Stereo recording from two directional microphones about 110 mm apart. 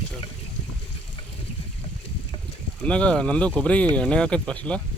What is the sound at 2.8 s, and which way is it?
Speech, 10° left (ahead or behind).